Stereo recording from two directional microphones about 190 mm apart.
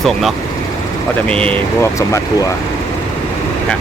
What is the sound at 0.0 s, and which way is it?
Speech, centre (ahead or behind).